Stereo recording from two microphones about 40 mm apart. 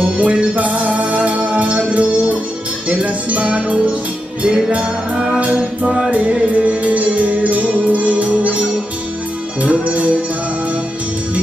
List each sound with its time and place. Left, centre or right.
0.0 s music: right
5.4 s music: right